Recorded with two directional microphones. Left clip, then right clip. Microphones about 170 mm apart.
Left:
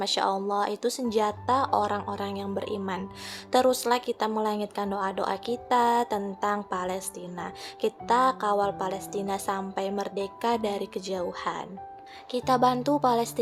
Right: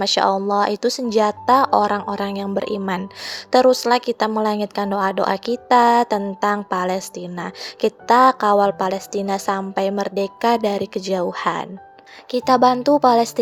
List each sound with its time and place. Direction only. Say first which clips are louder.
0.0 s speech: right 9 dB; 35° right (ahead or behind)